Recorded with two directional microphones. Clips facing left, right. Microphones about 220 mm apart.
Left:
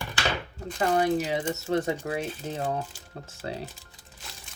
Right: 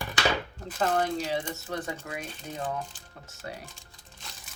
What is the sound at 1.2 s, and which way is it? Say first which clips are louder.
Speech: left 3 dB; 20° left (ahead or behind).